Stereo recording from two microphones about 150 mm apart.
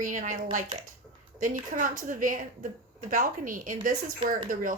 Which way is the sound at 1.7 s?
65° right (ahead or behind).